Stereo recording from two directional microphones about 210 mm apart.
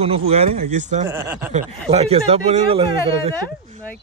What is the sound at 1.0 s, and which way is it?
Speech, 10° right (ahead or behind).